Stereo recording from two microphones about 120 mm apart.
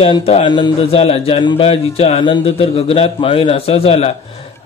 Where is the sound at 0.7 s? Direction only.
55° left (ahead or behind).